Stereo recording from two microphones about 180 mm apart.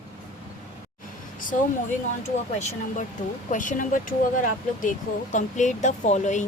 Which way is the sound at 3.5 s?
45° left (ahead or behind).